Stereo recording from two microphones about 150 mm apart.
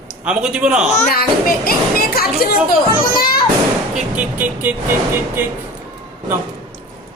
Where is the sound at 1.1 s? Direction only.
90° left.